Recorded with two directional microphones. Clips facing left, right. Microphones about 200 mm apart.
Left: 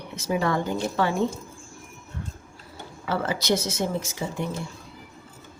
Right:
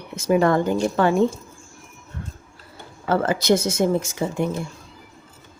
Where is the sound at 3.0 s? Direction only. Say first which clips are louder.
Right 6 dB; 50° right (ahead or behind).